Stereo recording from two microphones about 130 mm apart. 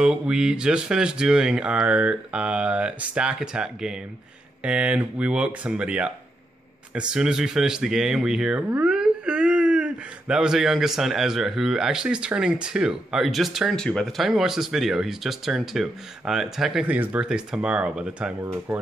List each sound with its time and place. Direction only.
0.0 s speech: 5° right (ahead or behind)
18.4 s speech: 20° right (ahead or behind)